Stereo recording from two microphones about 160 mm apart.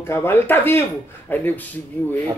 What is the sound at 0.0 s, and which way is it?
Speech, 15° left (ahead or behind).